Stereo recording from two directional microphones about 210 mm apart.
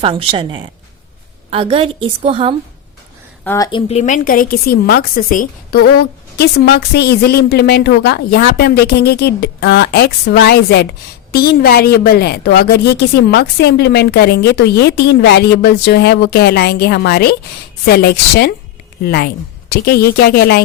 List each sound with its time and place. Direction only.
0.0 s a woman's voice: 25° right (ahead or behind)
3.4 s speech: 10° left (ahead or behind)
3.7 s a woman's voice: 25° left (ahead or behind); by 20.6 s 50° left (ahead or behind)